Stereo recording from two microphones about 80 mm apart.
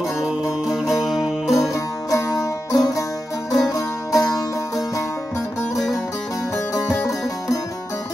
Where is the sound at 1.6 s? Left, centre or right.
Left.